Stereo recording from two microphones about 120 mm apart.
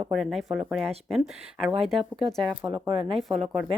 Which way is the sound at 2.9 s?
50° right (ahead or behind).